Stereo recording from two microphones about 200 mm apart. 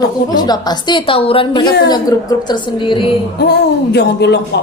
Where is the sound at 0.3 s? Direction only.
20° left (ahead or behind).